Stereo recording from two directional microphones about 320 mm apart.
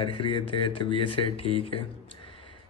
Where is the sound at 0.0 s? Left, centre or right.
Centre.